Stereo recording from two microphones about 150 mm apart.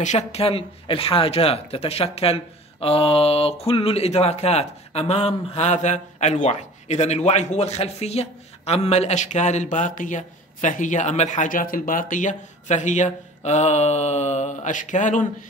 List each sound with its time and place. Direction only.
0.0 s speech: 50° left (ahead or behind)